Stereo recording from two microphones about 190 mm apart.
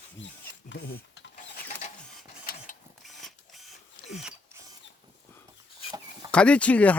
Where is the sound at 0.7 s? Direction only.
70° left (ahead or behind).